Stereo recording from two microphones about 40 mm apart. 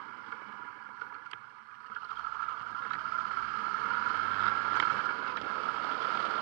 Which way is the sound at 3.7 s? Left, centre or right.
Right.